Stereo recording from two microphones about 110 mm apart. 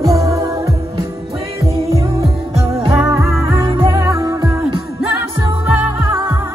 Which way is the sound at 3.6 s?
50° right (ahead or behind).